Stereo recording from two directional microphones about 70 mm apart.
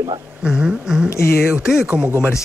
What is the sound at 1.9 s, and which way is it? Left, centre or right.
Speech, right.